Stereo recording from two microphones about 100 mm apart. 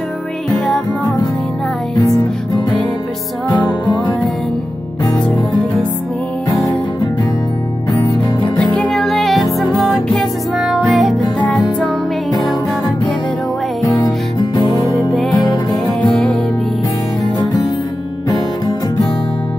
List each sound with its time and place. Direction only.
2.0 s music: 40° left (ahead or behind)
5.3 s music: 5° left (ahead or behind)
8.7 s music: 5° left (ahead or behind)
12.3 s music: 45° left (ahead or behind)
13.8 s music: 40° left (ahead or behind)
16.0 s music: 5° left (ahead or behind)